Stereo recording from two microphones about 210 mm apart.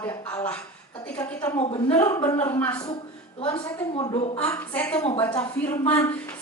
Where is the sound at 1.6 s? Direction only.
30° left (ahead or behind).